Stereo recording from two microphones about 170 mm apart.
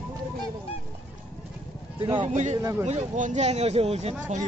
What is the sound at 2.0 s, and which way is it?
Speech, 30° right (ahead or behind).